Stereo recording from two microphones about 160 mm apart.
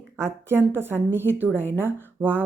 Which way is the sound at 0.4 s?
15° right (ahead or behind).